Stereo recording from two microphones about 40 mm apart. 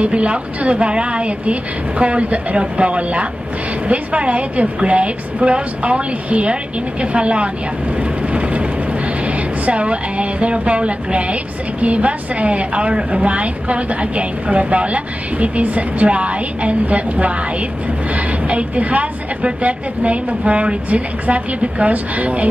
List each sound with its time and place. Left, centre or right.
0.0 s a woman's voice: right
8.0 s vehicle: right
9.7 s a woman's voice: right